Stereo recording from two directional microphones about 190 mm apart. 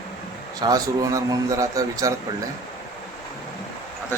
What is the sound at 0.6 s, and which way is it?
Speech, 20° right (ahead or behind).